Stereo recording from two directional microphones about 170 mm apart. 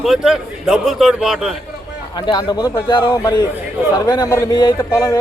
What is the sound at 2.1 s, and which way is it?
A man's voice, 25° left (ahead or behind).